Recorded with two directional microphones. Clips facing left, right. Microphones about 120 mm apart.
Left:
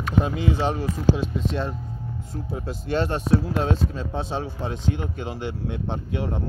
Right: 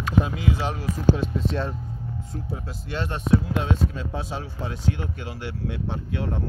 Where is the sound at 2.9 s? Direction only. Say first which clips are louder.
Left 2 dB; 35° left (ahead or behind).